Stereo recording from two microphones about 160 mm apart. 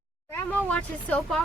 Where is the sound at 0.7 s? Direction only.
10° left (ahead or behind).